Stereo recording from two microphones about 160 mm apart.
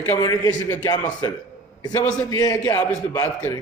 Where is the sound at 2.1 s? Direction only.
20° left (ahead or behind).